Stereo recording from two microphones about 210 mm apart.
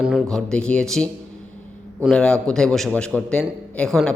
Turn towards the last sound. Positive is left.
turn(degrees=0)  # may be behind; listen again after turning